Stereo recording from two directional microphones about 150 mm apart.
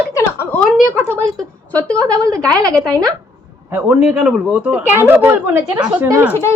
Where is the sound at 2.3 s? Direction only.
25° right (ahead or behind).